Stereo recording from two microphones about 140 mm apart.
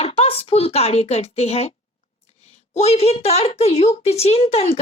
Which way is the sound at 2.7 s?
50° left (ahead or behind).